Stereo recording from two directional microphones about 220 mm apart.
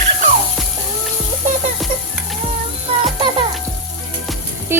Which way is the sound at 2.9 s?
25° right (ahead or behind).